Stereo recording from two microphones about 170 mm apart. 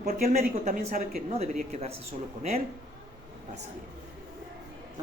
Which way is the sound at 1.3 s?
40° right (ahead or behind).